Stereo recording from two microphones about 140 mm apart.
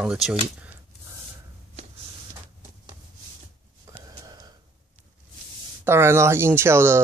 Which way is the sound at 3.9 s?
20° right (ahead or behind).